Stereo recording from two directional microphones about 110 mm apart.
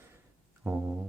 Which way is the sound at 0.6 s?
5° right (ahead or behind).